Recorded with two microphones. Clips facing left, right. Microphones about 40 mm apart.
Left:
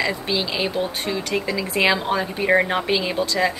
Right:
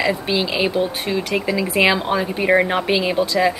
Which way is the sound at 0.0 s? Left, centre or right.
Centre.